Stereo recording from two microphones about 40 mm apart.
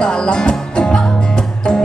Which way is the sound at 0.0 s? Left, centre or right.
Left.